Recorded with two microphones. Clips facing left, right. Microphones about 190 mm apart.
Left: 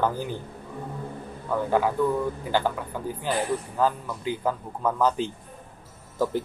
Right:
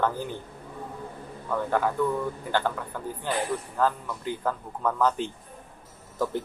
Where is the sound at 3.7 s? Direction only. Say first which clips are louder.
Even; 15° left (ahead or behind).